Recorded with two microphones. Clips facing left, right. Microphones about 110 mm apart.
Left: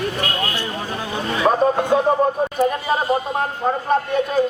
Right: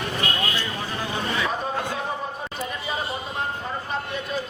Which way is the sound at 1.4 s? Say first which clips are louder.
Left 11 dB; 50° left (ahead or behind).